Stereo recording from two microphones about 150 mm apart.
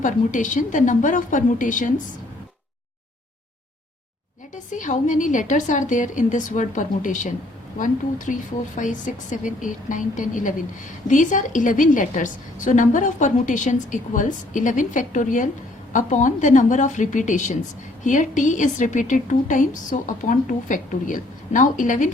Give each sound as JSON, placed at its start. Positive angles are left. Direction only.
{"t": 0.0, "sound": "a woman's voice", "side_deg": 55}
{"t": 4.5, "sound": "a woman's voice", "side_deg": 60}